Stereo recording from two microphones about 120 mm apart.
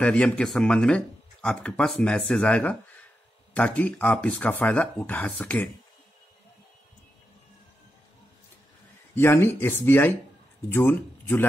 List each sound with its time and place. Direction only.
0.0 s speech: 10° left (ahead or behind)
9.1 s speech: 20° left (ahead or behind)